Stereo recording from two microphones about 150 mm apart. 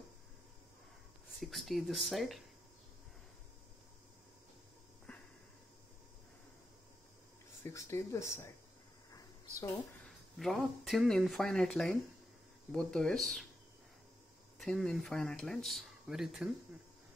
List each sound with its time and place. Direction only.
1.4 s speech: centre (ahead or behind)
5.1 s a sound: 5° left (ahead or behind)
7.6 s speech: 20° left (ahead or behind)
10.0 s speech: centre (ahead or behind)
14.6 s speech: 5° left (ahead or behind)